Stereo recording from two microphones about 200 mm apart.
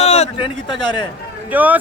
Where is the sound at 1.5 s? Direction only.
10° right (ahead or behind).